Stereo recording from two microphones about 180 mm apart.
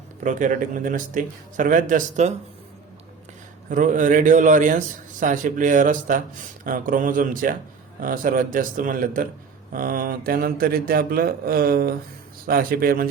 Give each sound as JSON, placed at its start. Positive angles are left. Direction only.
{"t": 0.2, "sound": "speech", "side_deg": -45}
{"t": 3.7, "sound": "speech", "side_deg": -45}